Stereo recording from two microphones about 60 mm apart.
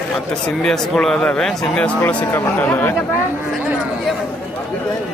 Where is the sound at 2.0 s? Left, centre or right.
Left.